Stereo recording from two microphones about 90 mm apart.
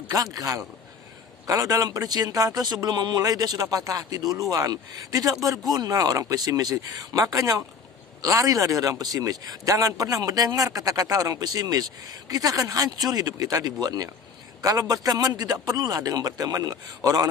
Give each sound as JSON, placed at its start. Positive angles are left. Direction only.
{"t": 0.1, "sound": "speech", "side_deg": -40}